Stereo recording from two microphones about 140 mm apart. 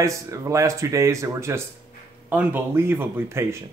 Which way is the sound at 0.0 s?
20° right (ahead or behind).